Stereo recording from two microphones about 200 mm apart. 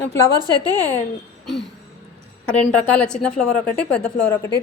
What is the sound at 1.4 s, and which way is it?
Throat clearing, centre (ahead or behind).